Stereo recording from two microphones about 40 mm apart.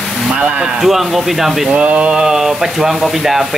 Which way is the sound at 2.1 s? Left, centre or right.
Centre.